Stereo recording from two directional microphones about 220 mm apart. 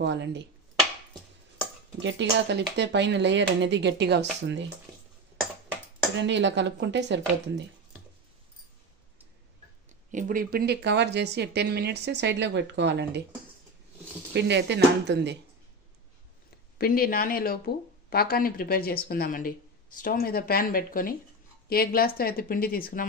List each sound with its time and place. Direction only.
0.0 s speech: 50° right (ahead or behind)
2.0 s speech: 55° right (ahead or behind)
6.2 s speech: 55° right (ahead or behind)
10.1 s speech: 40° right (ahead or behind)
14.3 s speech: 50° right (ahead or behind)
16.7 s speech: 40° left (ahead or behind)